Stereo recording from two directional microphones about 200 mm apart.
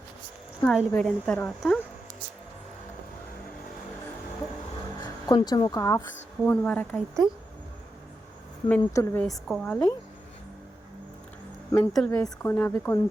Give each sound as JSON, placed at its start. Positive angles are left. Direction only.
{"t": 0.6, "sound": "speech", "side_deg": 5}
{"t": 5.2, "sound": "a woman's voice", "side_deg": 20}
{"t": 8.8, "sound": "speech", "side_deg": 15}
{"t": 9.5, "sound": "speech", "side_deg": 5}
{"t": 11.7, "sound": "speech", "side_deg": 5}